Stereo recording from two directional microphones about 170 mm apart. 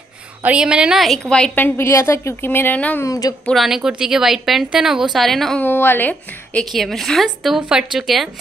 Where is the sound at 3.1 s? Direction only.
20° left (ahead or behind).